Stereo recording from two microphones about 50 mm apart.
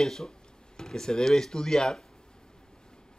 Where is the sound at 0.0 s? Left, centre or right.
Centre.